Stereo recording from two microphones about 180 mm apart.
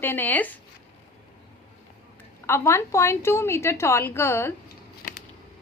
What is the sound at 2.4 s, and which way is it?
A woman's voice, 15° left (ahead or behind).